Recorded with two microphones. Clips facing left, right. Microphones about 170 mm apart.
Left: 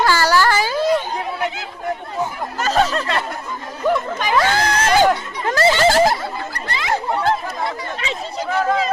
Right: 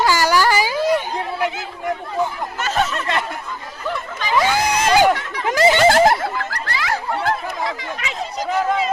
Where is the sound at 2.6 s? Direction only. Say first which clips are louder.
Left 4 dB; 35° left (ahead or behind).